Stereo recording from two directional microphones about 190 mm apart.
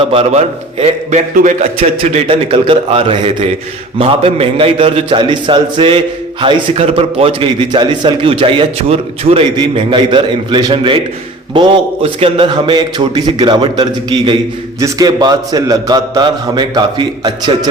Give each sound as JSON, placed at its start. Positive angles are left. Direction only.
{"t": 0.0, "sound": "a man's voice", "side_deg": -30}